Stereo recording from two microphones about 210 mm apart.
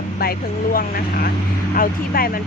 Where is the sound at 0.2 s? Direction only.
45° left (ahead or behind).